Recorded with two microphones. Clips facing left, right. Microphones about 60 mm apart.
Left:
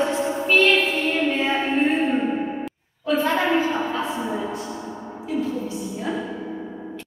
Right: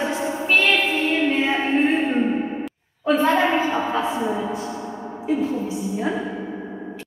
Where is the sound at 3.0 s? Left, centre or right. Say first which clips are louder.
Right 3 dB; right.